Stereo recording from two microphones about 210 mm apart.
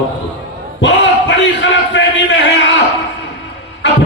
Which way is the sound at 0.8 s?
60° left (ahead or behind).